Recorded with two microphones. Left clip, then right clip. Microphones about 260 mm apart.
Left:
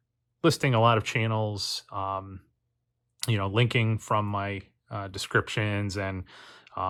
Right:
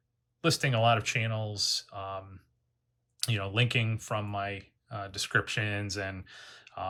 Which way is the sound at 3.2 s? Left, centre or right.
Centre.